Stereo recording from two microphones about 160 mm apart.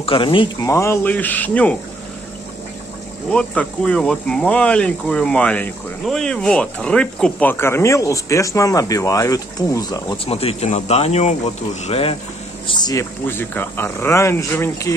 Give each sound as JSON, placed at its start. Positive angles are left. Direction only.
{"t": 0.0, "sound": "speech", "side_deg": 35}
{"t": 0.7, "sound": "speech", "side_deg": 15}
{"t": 3.3, "sound": "speech", "side_deg": 5}
{"t": 10.1, "sound": "speech", "side_deg": 35}
{"t": 12.6, "sound": "speech", "side_deg": 25}
{"t": 13.3, "sound": "speech", "side_deg": 15}